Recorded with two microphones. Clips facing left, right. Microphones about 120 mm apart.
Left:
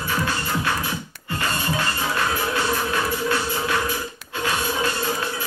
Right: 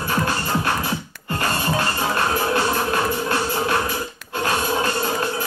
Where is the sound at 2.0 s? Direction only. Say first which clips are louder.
Right 3 dB; 40° right (ahead or behind).